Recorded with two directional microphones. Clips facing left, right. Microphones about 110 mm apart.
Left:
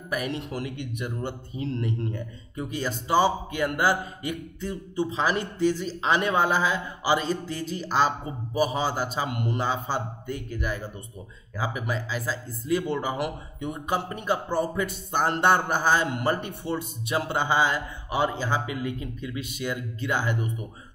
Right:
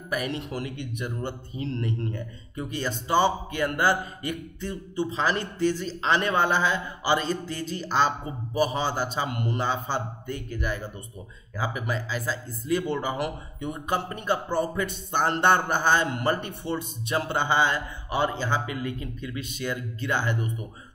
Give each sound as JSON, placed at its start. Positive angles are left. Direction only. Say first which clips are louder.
{"t": 0.1, "sound": "speech", "louder": "even", "side_deg": 0}